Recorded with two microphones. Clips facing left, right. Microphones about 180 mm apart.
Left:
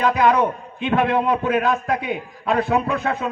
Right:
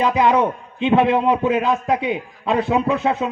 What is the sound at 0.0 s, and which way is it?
A man's voice, 20° right (ahead or behind).